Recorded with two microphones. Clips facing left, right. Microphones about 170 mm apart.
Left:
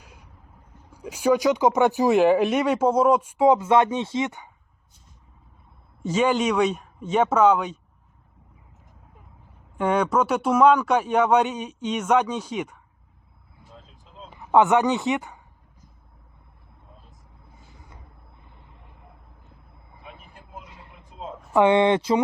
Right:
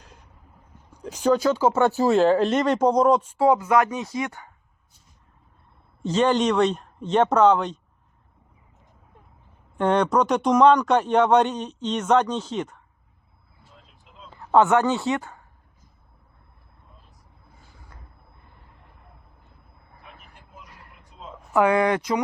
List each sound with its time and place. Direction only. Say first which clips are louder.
0.0 s vehicle: even; 10° left (ahead or behind)
0.9 s speech: even; 10° left (ahead or behind)
6.0 s speech: right 1 dB; 10° left (ahead or behind)
9.7 s speech: right 1 dB; 10° left (ahead or behind)
14.0 s a sound: left 4 dB; 40° left (ahead or behind)
14.3 s speech: even; 15° left (ahead or behind)
18.4 s vehicle: left 1 dB; 20° left (ahead or behind)
20.7 s a sound: left 3 dB; 20° left (ahead or behind)